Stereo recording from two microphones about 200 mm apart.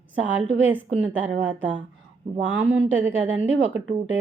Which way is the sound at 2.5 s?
5° right (ahead or behind).